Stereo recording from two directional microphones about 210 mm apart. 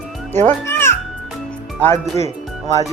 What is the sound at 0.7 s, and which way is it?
Music, 10° left (ahead or behind).